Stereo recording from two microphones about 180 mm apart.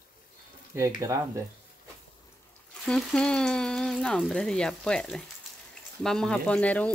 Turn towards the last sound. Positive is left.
turn(degrees=10)  # may be behind; listen again after turning